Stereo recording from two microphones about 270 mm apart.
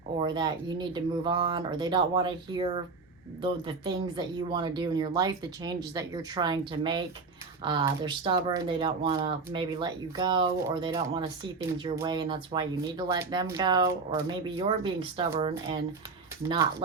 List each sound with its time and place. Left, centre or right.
0.2 s speech: centre